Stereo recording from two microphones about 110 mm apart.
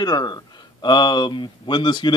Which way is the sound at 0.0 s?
40° left (ahead or behind).